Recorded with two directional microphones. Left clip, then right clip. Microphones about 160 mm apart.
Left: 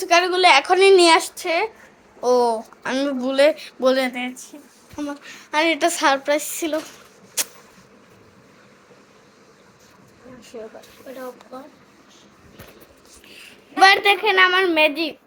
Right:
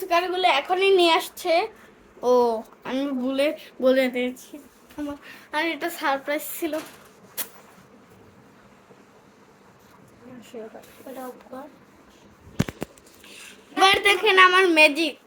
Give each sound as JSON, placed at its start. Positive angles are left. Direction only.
{"t": 0.0, "sound": "a woman's voice", "side_deg": 35}
{"t": 0.8, "sound": "speech", "side_deg": 15}
{"t": 1.4, "sound": "a child's voice", "side_deg": -15}
{"t": 2.8, "sound": "speech", "side_deg": 10}
{"t": 4.5, "sound": "a woman's voice", "side_deg": -5}
{"t": 4.9, "sound": "a woman's voice", "side_deg": 10}
{"t": 6.2, "sound": "speech", "side_deg": 10}
{"t": 7.4, "sound": "a sound", "side_deg": 15}
{"t": 13.7, "sound": "a child's voice", "side_deg": -5}